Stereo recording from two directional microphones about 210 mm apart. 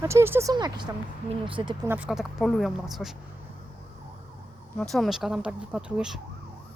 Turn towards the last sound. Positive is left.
turn(degrees=-5)  # may be behind; listen again after turning